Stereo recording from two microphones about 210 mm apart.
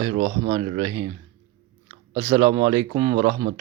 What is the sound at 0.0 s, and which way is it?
A man's voice, 35° right (ahead or behind).